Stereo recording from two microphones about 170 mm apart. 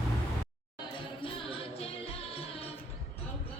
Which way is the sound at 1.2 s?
35° left (ahead or behind).